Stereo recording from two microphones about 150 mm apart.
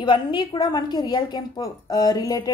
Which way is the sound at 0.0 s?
30° left (ahead or behind).